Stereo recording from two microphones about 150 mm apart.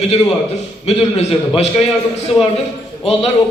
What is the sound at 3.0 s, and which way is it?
Speech, 40° left (ahead or behind).